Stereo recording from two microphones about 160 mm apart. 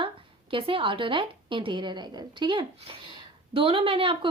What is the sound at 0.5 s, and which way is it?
A woman's voice, 35° right (ahead or behind).